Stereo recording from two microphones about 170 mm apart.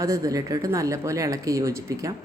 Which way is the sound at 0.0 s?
20° right (ahead or behind).